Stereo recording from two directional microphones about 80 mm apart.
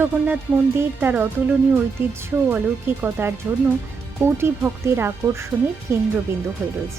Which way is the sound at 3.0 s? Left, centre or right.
Right.